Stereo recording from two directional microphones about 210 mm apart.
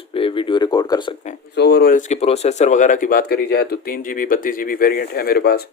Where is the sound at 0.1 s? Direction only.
25° left (ahead or behind).